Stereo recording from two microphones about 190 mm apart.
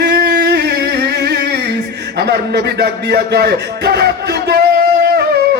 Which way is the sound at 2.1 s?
60° right (ahead or behind).